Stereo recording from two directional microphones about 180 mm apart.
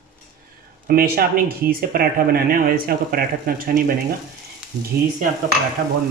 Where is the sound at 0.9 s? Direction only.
55° right (ahead or behind).